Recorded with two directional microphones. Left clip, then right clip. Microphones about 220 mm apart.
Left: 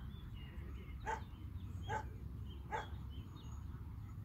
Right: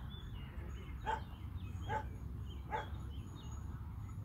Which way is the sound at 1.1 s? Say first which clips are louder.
Right 3 dB; 40° left (ahead or behind).